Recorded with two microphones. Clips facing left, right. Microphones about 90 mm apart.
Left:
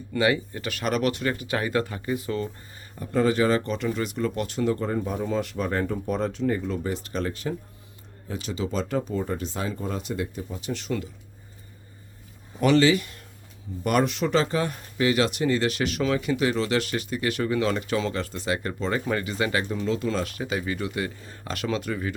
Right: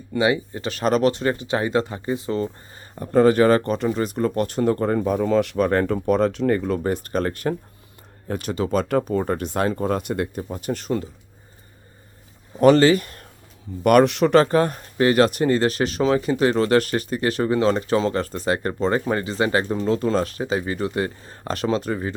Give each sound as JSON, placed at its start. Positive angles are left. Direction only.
{"t": 0.1, "sound": "speech", "side_deg": -20}
{"t": 3.8, "sound": "speech", "side_deg": -35}
{"t": 12.5, "sound": "speech", "side_deg": -45}
{"t": 13.8, "sound": "speech", "side_deg": -65}